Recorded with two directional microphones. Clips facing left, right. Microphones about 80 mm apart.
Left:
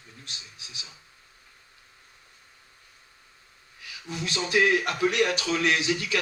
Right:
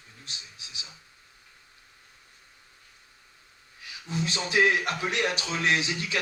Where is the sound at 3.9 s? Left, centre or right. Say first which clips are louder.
Right 2 dB; right.